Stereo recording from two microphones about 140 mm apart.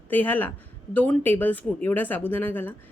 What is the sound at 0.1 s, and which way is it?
Speech, 15° left (ahead or behind).